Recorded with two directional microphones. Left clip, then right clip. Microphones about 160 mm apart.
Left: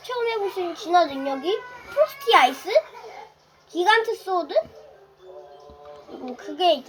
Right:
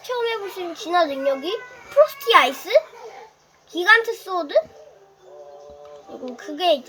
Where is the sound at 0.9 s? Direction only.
65° right (ahead or behind).